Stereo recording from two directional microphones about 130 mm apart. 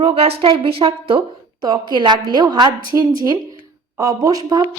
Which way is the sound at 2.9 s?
20° right (ahead or behind).